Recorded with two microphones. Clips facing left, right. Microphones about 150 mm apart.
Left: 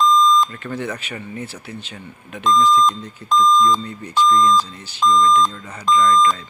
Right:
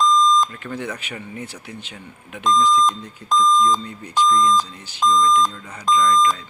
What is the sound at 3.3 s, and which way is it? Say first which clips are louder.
Speech: left 2 dB; 40° right (ahead or behind).